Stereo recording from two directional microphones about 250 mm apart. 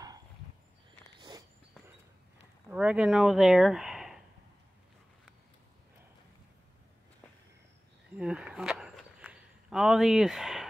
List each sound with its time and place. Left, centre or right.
2.7 s speech: centre
8.2 s walk: centre